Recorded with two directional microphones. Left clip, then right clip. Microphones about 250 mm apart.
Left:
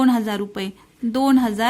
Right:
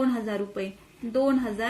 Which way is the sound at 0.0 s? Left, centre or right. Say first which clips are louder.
Left 7 dB; left.